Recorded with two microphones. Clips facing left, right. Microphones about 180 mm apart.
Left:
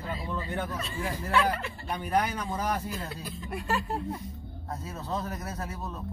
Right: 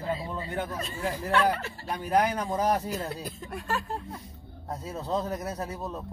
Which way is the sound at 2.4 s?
40° right (ahead or behind).